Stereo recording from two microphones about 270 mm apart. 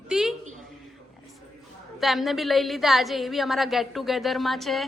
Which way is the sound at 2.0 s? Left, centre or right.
Centre.